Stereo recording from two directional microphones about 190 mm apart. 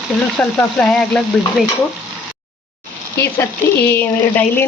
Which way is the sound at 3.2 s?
15° left (ahead or behind).